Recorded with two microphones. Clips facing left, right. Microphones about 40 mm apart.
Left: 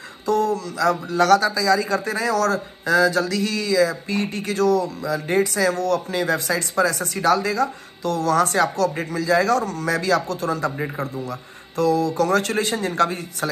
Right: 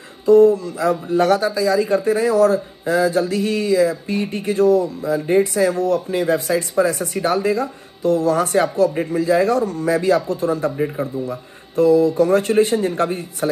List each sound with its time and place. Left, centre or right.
0.3 s speech: left
12.1 s speech: left